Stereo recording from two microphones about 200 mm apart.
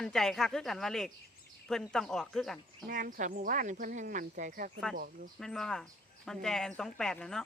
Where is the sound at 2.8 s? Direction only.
40° right (ahead or behind).